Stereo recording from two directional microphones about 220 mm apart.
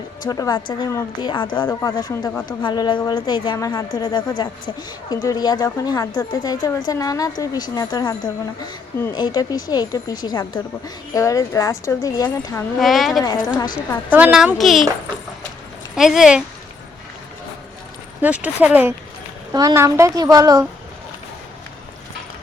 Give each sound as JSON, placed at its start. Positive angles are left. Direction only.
{"t": 0.3, "sound": "a woman's voice", "side_deg": 15}
{"t": 12.8, "sound": "speech", "side_deg": 0}
{"t": 16.0, "sound": "speech", "side_deg": 0}
{"t": 18.2, "sound": "a woman's voice", "side_deg": -5}